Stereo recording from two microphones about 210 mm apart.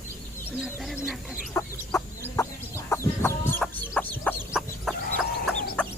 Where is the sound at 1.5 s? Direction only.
15° left (ahead or behind).